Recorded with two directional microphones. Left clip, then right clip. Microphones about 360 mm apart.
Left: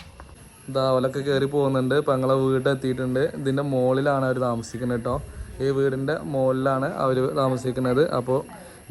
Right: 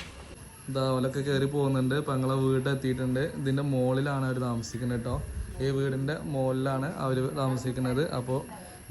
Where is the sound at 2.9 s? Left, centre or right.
Left.